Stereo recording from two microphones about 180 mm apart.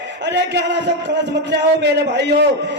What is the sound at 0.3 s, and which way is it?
A man's voice, 75° right (ahead or behind).